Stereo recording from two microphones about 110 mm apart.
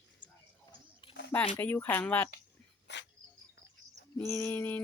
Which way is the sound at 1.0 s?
50° left (ahead or behind).